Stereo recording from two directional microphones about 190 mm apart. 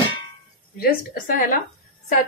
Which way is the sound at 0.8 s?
50° left (ahead or behind).